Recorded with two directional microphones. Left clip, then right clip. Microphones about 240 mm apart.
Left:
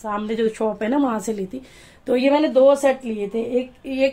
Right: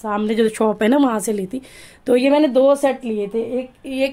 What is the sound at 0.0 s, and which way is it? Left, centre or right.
Speech, right.